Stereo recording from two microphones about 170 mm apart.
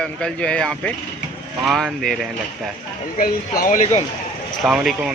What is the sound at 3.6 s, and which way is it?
Speech, 50° left (ahead or behind).